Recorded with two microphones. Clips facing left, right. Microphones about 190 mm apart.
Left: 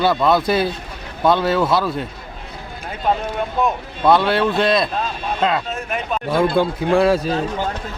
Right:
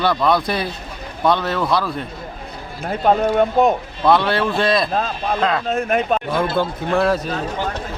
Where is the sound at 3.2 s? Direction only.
55° right (ahead or behind).